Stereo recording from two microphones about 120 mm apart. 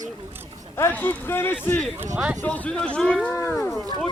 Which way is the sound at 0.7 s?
20° left (ahead or behind).